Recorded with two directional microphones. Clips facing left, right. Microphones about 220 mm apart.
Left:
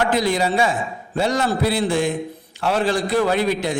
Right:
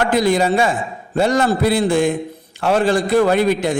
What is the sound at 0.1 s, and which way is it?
A man's voice, 50° right (ahead or behind).